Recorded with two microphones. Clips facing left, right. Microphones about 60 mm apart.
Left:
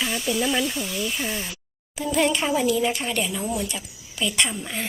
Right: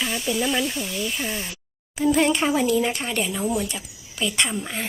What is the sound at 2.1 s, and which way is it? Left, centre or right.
Speech, right.